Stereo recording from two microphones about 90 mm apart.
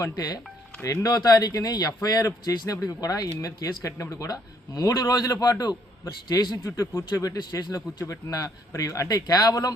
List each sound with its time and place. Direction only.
0.0 s speech: 45° left (ahead or behind)
0.8 s speech: 30° left (ahead or behind)
1.0 s a man's voice: 45° left (ahead or behind)